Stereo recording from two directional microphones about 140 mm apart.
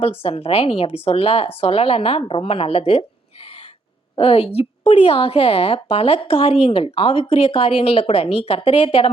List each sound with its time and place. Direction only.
0.0 s a woman's voice: 45° left (ahead or behind)
4.2 s a woman's voice: 45° left (ahead or behind)